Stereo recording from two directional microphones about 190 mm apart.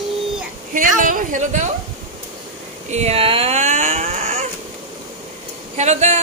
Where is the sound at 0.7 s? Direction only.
45° right (ahead or behind).